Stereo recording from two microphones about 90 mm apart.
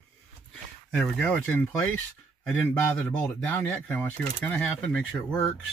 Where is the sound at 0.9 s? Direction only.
10° left (ahead or behind).